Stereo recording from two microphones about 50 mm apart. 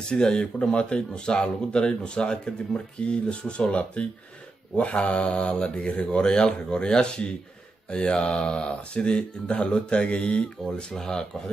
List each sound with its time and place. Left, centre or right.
0.1 s speech: centre